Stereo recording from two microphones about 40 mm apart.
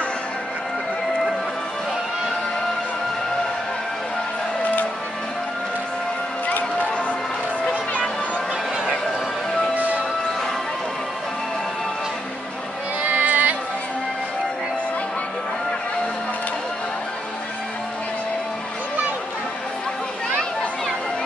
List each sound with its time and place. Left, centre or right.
13.0 s music: right